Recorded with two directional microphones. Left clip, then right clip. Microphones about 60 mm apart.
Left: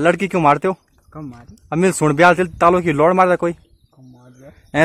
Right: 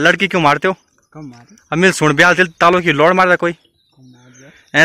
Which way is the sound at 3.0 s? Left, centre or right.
Centre.